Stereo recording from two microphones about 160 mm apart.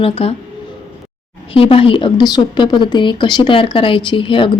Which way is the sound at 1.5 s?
35° left (ahead or behind).